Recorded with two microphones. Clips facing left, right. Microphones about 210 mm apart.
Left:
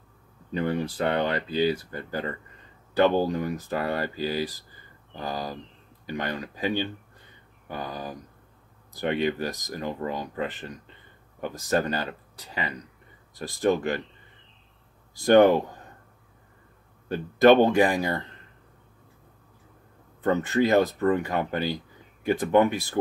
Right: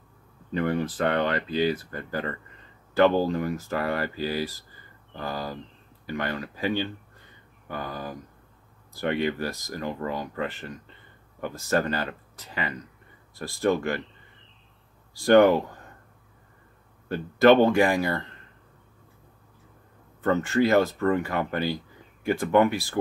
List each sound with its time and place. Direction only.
0.6 s speech: 15° left (ahead or behind)
15.1 s speech: 20° left (ahead or behind)
17.1 s speech: 20° left (ahead or behind)
20.2 s speech: 20° left (ahead or behind)